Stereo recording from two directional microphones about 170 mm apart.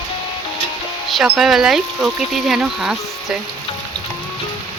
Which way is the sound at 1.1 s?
Centre (ahead or behind).